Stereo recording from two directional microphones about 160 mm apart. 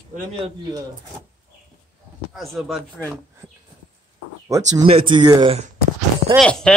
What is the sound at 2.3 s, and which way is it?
Speech, centre (ahead or behind).